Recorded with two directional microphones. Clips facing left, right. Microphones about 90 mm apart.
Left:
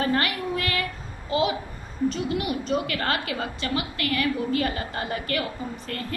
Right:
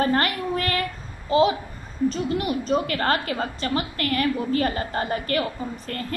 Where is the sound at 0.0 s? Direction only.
40° right (ahead or behind).